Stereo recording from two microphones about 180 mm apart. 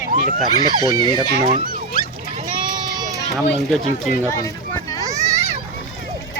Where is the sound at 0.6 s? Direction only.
20° left (ahead or behind).